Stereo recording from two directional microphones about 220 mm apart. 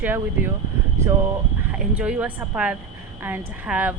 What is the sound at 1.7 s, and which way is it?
Speech, 5° right (ahead or behind).